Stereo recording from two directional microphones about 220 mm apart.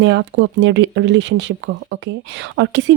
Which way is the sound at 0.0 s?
55° right (ahead or behind).